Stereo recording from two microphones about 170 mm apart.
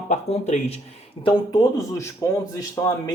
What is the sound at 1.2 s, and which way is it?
Speech, 25° left (ahead or behind).